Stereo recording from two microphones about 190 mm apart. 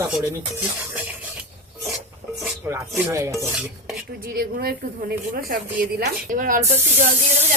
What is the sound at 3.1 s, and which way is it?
Cutlery, 15° right (ahead or behind).